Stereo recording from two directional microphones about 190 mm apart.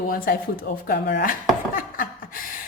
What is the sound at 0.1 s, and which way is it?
A woman's voice, 50° left (ahead or behind).